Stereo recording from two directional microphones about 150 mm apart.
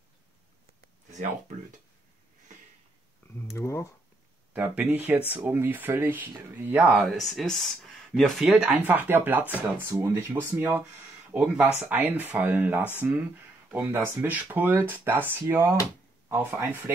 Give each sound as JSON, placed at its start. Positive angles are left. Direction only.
{"t": 3.3, "sound": "speech", "side_deg": 20}
{"t": 4.6, "sound": "speech", "side_deg": -10}
{"t": 8.5, "sound": "speech", "side_deg": -10}